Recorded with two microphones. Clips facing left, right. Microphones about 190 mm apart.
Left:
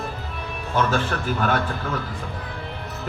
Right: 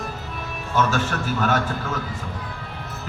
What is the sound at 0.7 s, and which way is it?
Speech, 45° right (ahead or behind).